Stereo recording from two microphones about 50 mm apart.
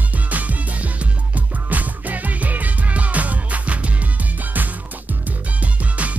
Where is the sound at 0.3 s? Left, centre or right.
Right.